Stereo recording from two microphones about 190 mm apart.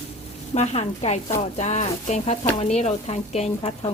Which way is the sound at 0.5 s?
35° left (ahead or behind).